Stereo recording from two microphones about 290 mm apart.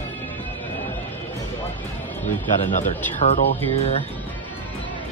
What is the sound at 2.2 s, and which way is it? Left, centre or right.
Speech, left.